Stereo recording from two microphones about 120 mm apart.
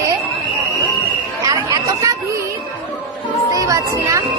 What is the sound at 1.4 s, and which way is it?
Chatter, 30° right (ahead or behind).